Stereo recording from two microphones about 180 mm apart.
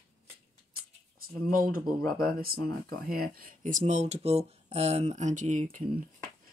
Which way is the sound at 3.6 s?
45° right (ahead or behind).